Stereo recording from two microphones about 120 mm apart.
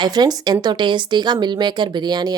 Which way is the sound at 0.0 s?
35° right (ahead or behind).